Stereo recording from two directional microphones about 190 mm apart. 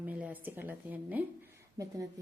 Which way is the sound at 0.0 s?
10° right (ahead or behind).